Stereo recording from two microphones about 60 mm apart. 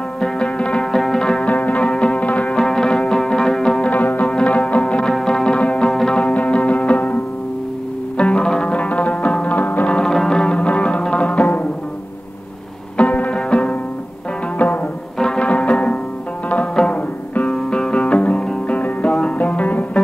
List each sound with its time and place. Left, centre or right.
0.2 s music: centre
1.4 s music: left
2.5 s music: centre
3.9 s music: left
5.0 s music: centre
6.3 s music: left
8.2 s music: centre
9.6 s music: left
9.8 s music: centre
12.9 s music: left
15.1 s music: centre
17.5 s music: centre